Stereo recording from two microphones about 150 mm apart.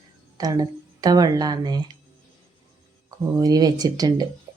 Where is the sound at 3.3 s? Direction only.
25° right (ahead or behind).